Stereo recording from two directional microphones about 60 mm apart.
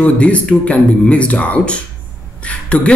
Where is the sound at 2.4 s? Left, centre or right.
Left.